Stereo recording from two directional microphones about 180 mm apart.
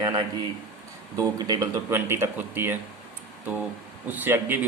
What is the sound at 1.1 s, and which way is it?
Speech, 20° right (ahead or behind).